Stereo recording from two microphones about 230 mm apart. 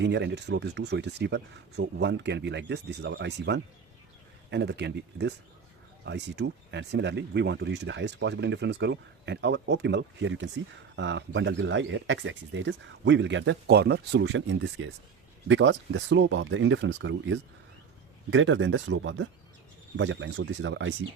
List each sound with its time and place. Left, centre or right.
0.0 s speech: right